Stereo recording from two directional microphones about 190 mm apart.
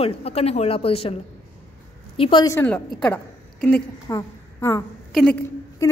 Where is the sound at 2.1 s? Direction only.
25° left (ahead or behind).